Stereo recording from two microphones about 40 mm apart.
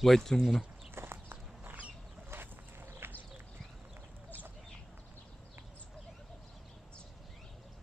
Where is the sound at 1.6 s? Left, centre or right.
Right.